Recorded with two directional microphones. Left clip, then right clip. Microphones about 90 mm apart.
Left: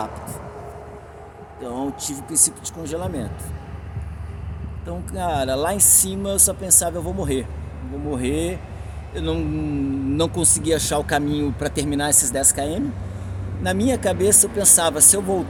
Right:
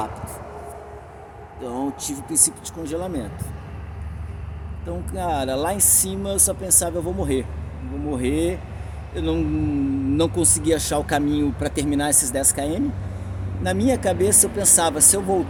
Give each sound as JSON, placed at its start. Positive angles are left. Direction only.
{"t": 1.6, "sound": "speech", "side_deg": 40}
{"t": 4.9, "sound": "speech", "side_deg": 50}